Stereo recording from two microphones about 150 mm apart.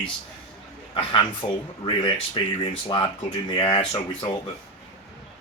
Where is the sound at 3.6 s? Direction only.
40° left (ahead or behind).